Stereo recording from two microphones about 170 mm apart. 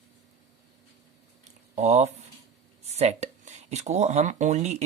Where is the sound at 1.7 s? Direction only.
40° right (ahead or behind).